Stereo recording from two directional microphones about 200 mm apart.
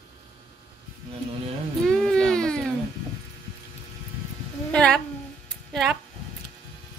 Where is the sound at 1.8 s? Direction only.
Centre (ahead or behind).